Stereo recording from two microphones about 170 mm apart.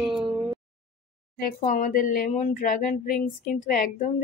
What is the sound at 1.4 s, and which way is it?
Speech, 50° left (ahead or behind).